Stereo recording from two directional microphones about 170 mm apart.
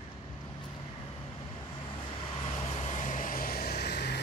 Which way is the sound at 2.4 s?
35° left (ahead or behind).